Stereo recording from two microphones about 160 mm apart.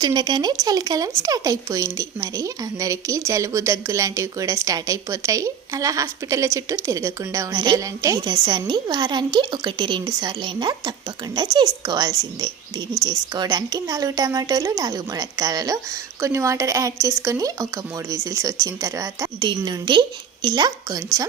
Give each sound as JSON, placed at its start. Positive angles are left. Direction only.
{"t": 0.0, "sound": "speech", "side_deg": -25}